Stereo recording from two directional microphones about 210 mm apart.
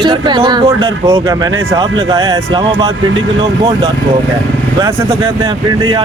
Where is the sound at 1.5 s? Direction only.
70° right (ahead or behind).